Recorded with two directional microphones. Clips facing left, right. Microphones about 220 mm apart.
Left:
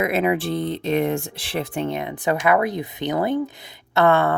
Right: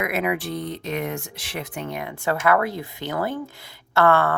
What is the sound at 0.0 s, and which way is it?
Speech, 25° left (ahead or behind).